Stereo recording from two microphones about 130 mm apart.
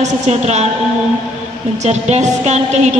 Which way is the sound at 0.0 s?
60° right (ahead or behind).